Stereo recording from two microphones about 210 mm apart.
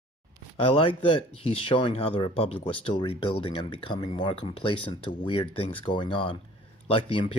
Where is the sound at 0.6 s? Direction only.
25° left (ahead or behind).